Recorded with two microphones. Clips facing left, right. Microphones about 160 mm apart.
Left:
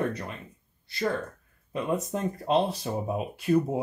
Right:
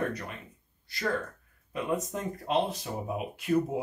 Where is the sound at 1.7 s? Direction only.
30° left (ahead or behind).